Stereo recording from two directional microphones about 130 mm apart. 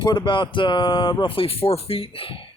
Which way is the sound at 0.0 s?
35° left (ahead or behind).